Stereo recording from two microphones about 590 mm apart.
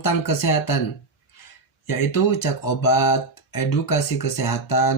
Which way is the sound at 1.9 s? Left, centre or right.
Left.